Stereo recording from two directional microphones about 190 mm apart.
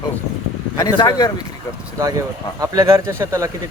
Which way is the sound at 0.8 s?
20° left (ahead or behind).